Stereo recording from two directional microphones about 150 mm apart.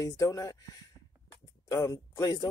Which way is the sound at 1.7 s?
25° left (ahead or behind).